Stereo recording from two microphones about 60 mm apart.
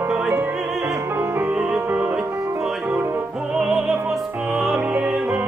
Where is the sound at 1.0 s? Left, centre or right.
Right.